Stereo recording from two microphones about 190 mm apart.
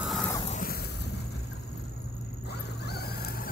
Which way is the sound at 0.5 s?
50° left (ahead or behind).